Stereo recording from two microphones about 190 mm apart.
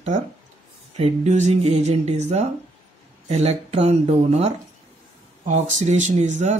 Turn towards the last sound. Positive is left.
turn(degrees=-40)  # may be behind; listen again after turning